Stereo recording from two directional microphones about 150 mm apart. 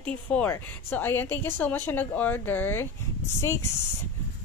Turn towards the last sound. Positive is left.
turn(degrees=20)  # may be behind; listen again after turning